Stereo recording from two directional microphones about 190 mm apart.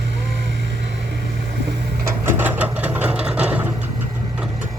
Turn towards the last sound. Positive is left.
turn(degrees=-10)  # may be behind; listen again after turning